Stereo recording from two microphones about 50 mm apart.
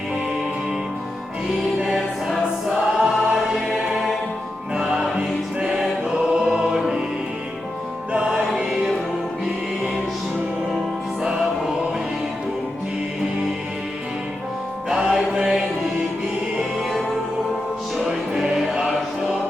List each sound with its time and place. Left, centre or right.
2.2 s choir: centre
4.7 s music: centre
5.8 s choir: centre
8.3 s music: centre
11.2 s music: centre
14.8 s music: centre
17.9 s music: centre